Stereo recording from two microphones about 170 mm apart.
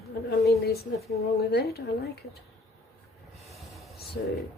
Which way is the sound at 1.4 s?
65° left (ahead or behind).